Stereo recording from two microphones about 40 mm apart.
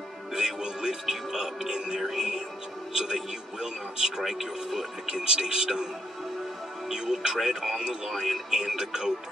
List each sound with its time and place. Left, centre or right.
0.3 s music: centre
3.0 s speech: centre
6.9 s speech: centre